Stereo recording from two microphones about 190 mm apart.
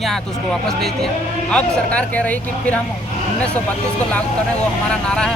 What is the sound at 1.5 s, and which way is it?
Speech, 5° left (ahead or behind).